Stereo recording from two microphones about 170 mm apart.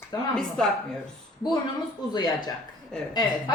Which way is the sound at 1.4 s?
25° left (ahead or behind).